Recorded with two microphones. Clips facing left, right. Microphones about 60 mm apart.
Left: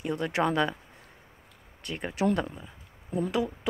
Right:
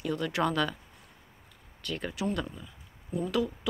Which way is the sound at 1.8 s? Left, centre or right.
Left.